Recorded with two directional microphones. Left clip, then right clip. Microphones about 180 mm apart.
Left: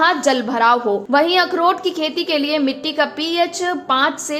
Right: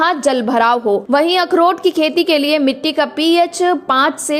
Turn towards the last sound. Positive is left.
turn(degrees=-40)  # may be behind; listen again after turning